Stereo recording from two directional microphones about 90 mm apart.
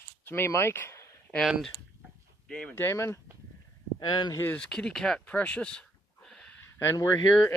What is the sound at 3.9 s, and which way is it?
Speech, 50° left (ahead or behind).